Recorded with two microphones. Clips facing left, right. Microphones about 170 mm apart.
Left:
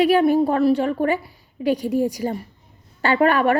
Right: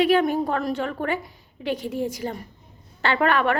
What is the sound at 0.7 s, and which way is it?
A woman's voice, 35° left (ahead or behind).